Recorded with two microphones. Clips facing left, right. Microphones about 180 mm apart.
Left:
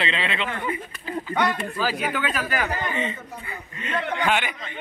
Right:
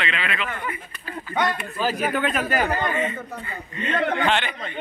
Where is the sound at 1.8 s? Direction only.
20° right (ahead or behind).